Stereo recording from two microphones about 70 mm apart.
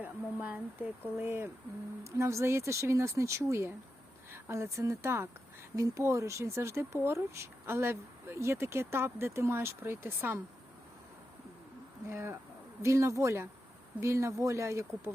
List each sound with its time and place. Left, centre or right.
0.0 s speech: right
1.2 s speech: right
2.0 s speech: right
12.0 s speech: right